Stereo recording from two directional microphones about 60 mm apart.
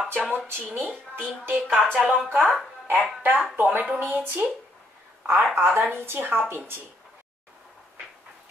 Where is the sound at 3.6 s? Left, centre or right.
Right.